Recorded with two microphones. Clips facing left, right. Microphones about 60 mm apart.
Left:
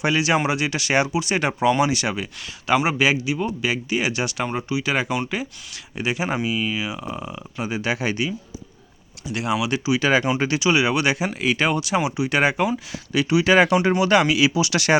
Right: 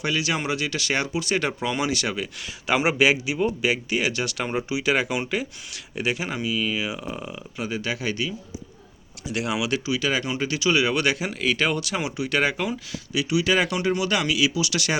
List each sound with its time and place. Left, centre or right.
0.0 s speech: left; by 2.3 s centre
2.6 s speech: centre
4.1 s speech: centre
4.4 s speech: centre
6.2 s speech: left
6.7 s speech: centre
7.6 s speech: centre
9.2 s speech: centre
9.9 s speech: left
10.6 s speech: centre
13.1 s speech: left